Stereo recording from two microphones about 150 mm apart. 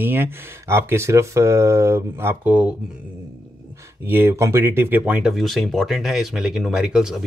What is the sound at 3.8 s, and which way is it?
Speech, 15° right (ahead or behind).